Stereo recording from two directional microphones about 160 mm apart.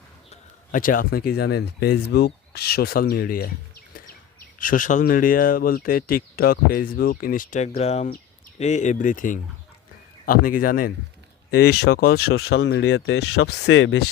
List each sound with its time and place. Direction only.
0.3 s a man's voice: 55° left (ahead or behind)
11.5 s speech: 90° left